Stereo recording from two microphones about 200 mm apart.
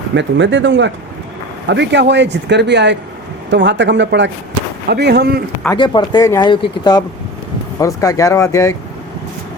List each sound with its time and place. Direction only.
0.1 s speech: 65° right (ahead or behind)
5.7 s speech: 25° left (ahead or behind)